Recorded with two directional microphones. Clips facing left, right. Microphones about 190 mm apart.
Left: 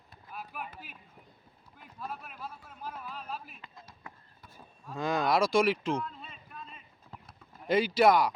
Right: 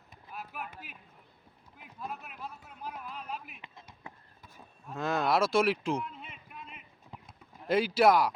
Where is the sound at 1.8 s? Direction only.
5° right (ahead or behind).